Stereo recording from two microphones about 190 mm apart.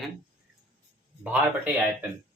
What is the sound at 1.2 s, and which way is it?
Speech, 10° right (ahead or behind).